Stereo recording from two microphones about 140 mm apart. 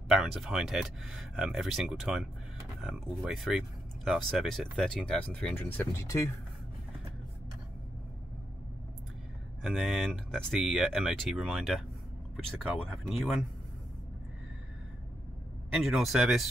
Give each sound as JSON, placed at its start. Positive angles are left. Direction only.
{"t": 0.1, "sound": "speech", "side_deg": -5}
{"t": 9.6, "sound": "speech", "side_deg": 0}
{"t": 15.7, "sound": "speech", "side_deg": 0}